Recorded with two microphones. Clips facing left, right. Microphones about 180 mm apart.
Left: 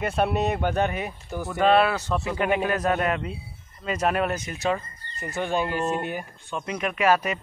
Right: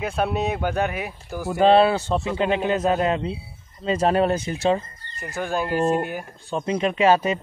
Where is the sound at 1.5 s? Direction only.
30° right (ahead or behind).